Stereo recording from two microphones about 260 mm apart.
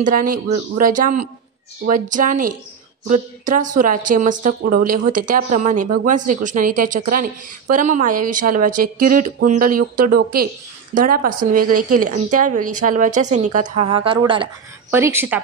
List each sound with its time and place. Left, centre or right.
0.0 s speech: right
14.9 s speech: centre